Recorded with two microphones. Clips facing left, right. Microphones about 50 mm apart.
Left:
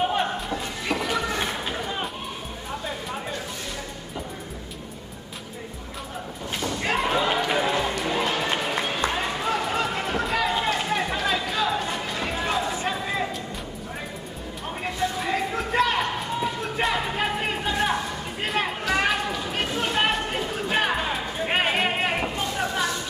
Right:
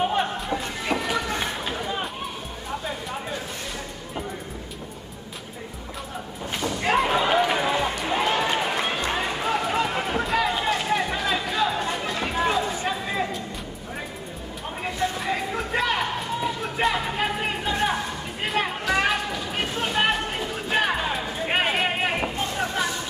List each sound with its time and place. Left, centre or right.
0.0 s music: centre
1.4 s a sound: centre
6.6 s slam: centre
8.1 s music: centre
9.0 s run: centre
11.3 s music: centre
14.8 s a sound: centre